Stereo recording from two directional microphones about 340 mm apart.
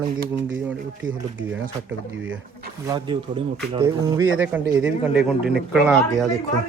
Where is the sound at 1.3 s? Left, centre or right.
Right.